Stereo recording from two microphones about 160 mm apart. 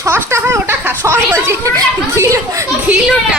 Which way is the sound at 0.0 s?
15° right (ahead or behind).